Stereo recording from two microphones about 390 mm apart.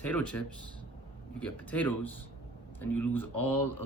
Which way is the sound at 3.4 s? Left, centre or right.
Left.